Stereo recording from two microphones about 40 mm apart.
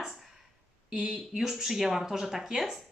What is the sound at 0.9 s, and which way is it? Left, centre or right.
Speech, centre.